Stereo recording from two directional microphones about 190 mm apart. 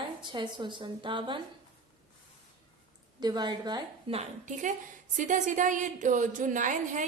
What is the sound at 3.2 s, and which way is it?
A woman's voice, 20° right (ahead or behind).